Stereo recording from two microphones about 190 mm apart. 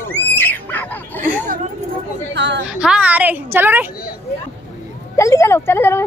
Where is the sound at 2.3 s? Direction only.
65° right (ahead or behind).